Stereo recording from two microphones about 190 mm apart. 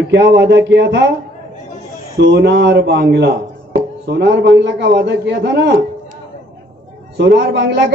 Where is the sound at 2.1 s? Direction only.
60° right (ahead or behind).